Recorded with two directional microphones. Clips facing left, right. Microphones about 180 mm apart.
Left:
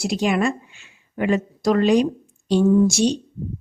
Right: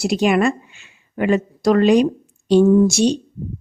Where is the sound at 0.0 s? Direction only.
65° right (ahead or behind).